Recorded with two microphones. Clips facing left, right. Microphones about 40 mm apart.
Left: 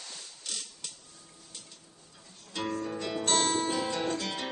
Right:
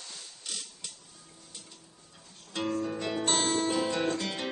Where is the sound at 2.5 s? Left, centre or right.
Centre.